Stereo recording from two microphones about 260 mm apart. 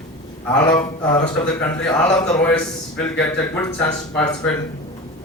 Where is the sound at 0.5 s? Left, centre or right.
Centre.